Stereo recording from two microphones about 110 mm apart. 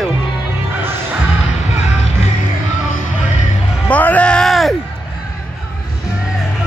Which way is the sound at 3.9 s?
15° left (ahead or behind).